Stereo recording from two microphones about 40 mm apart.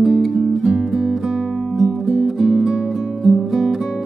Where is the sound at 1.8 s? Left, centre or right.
Centre.